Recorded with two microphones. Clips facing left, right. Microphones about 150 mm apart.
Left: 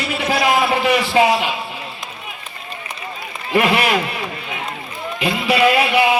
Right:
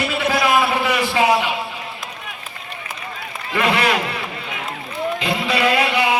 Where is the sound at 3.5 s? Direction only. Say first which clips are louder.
Left 3 dB; 20° left (ahead or behind).